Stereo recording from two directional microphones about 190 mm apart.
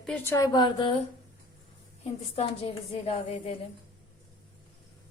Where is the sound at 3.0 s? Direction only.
30° left (ahead or behind).